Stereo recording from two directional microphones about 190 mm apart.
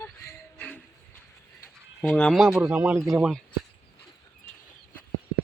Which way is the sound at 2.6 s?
10° right (ahead or behind).